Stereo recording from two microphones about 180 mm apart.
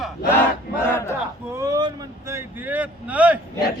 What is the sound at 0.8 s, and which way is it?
Speech, 15° left (ahead or behind).